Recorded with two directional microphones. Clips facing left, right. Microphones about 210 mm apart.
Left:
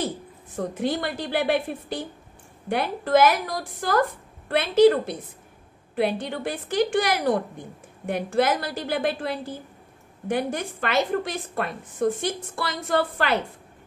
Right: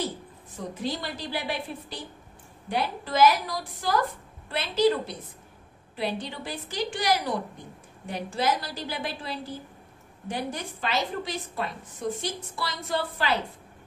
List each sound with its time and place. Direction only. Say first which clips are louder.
0.6 s a woman's voice: left 6 dB; 55° left (ahead or behind)